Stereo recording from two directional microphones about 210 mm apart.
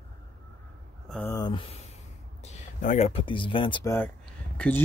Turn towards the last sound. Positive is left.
turn(degrees=5)  # may be behind; listen again after turning